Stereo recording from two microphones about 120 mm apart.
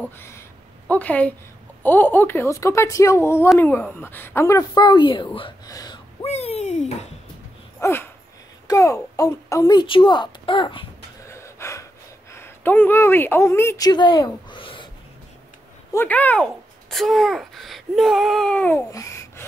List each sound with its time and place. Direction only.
0.0 s a sound: 20° left (ahead or behind)
1.8 s speech: 15° left (ahead or behind)
4.7 s speech: 40° left (ahead or behind)
5.7 s speech: 30° left (ahead or behind)
6.2 s a sound: 65° left (ahead or behind)
7.8 s a child's voice: 20° left (ahead or behind); by 10.9 s 45° left (ahead or behind)
11.2 s gasp: 25° left (ahead or behind)
12.3 s speech: 20° left (ahead or behind)
13.8 s speech: 40° left (ahead or behind)
15.9 s speech: 15° left (ahead or behind)
16.9 s speech: centre (ahead or behind)
18.8 s babbling: 25° left (ahead or behind)